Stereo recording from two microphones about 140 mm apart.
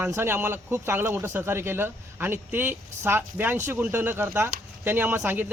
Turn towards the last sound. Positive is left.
turn(degrees=-15)  # may be behind; listen again after turning